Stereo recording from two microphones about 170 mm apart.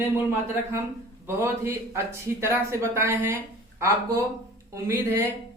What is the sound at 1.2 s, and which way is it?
Speech, 15° right (ahead or behind).